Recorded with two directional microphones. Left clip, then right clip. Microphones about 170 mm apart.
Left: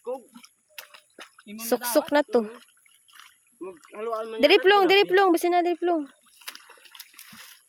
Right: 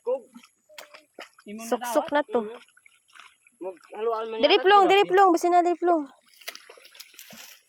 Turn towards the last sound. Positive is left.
turn(degrees=0)  # may be behind; listen again after turning